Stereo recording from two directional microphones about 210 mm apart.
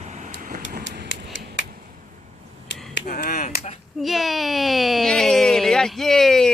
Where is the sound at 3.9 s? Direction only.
Centre (ahead or behind).